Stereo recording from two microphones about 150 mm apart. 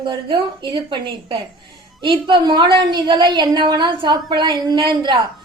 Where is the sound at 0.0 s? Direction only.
30° right (ahead or behind).